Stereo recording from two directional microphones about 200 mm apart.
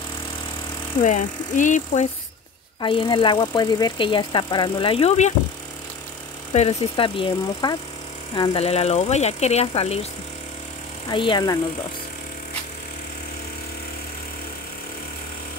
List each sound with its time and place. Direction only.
1.0 s speech: 40° left (ahead or behind)
2.8 s speech: 25° left (ahead or behind)
6.5 s speech: 30° left (ahead or behind)
11.1 s speech: 25° left (ahead or behind)